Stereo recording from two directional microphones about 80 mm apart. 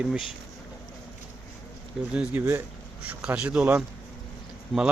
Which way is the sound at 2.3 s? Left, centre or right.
Right.